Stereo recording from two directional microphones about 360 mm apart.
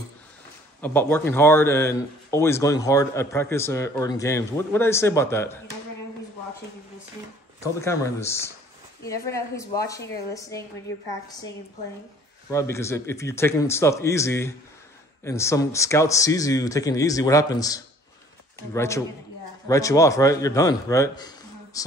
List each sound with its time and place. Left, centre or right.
0.7 s a man's voice: centre
7.6 s a man's voice: centre
12.4 s a man's voice: centre